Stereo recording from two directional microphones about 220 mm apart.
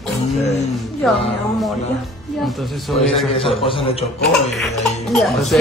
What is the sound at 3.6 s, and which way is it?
Speech, 25° left (ahead or behind).